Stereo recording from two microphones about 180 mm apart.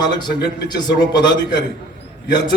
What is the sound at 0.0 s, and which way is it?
Speech, 25° left (ahead or behind).